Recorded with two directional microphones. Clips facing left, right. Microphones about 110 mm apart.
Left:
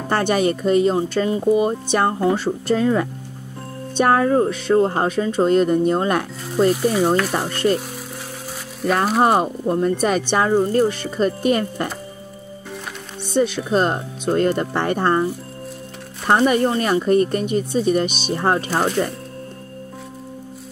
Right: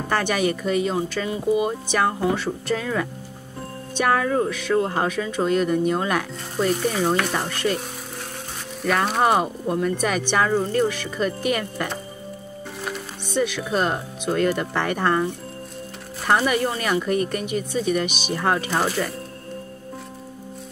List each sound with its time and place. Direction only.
0.1 s speech: 35° left (ahead or behind)
6.7 s speech: 5° left (ahead or behind)
7.3 s speech: 40° left (ahead or behind)
9.4 s speech: 35° left (ahead or behind)
13.3 s speech: 35° left (ahead or behind)
16.3 s speech: 30° left (ahead or behind)
18.7 s speech: centre (ahead or behind)